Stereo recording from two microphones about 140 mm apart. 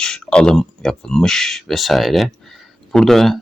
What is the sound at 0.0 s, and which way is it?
Speech, 5° left (ahead or behind).